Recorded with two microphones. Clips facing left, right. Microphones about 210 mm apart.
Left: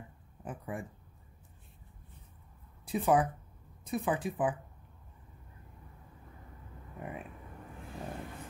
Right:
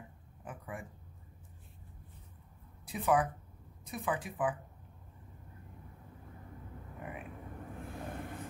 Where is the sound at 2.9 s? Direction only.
30° left (ahead or behind).